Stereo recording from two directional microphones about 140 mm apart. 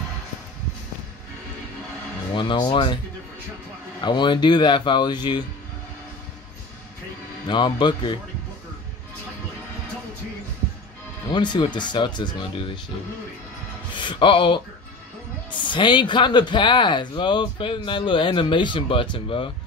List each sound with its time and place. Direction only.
2.3 s speech: 35° left (ahead or behind)
4.0 s speech: 35° left (ahead or behind)
7.4 s speech: 35° left (ahead or behind)
11.2 s speech: 30° left (ahead or behind)
13.9 s speech: 35° left (ahead or behind)